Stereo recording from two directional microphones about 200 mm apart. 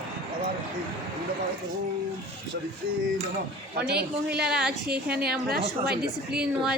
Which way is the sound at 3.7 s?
55° right (ahead or behind).